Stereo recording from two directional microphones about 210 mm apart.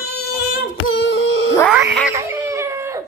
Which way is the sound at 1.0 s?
65° left (ahead or behind).